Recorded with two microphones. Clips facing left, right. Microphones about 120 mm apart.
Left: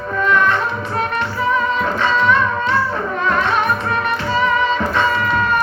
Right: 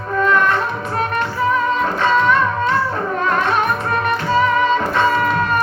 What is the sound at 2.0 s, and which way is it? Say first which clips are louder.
Music: right 1 dB; 45° right (ahead or behind).